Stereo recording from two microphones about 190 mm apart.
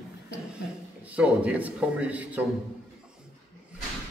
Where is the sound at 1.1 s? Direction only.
5° right (ahead or behind).